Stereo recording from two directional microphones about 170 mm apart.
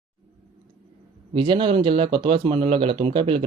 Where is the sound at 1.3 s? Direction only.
30° right (ahead or behind).